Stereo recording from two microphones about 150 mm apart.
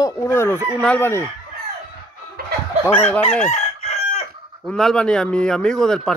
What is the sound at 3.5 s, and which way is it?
Crowing, 50° left (ahead or behind).